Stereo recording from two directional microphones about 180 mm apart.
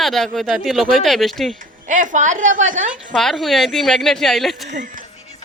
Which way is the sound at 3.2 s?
Centre (ahead or behind).